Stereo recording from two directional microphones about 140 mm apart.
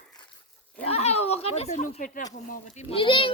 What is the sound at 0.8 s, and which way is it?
Speech, 45° left (ahead or behind).